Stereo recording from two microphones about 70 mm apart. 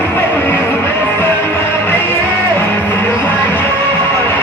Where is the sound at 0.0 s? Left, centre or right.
Left.